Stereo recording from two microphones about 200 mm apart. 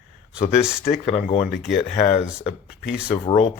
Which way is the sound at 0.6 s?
5° right (ahead or behind).